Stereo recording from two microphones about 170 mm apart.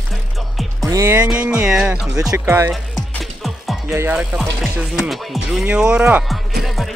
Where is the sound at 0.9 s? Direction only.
15° right (ahead or behind).